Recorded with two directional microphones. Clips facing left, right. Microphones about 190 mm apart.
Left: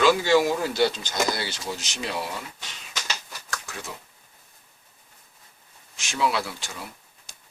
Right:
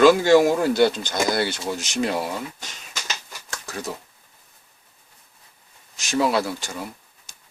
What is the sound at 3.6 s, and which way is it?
Speech, 40° right (ahead or behind).